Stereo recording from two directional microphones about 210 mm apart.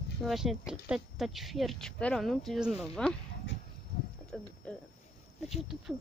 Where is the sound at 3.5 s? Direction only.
60° left (ahead or behind).